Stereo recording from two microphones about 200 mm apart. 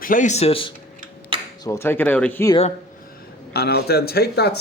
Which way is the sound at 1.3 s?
25° right (ahead or behind).